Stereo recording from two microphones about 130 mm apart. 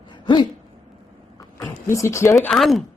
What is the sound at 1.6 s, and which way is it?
Speech, 25° left (ahead or behind).